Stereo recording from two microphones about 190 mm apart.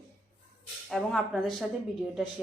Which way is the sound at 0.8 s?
Centre (ahead or behind).